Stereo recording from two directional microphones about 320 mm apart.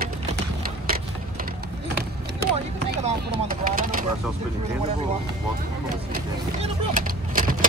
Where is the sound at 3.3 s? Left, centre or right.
Right.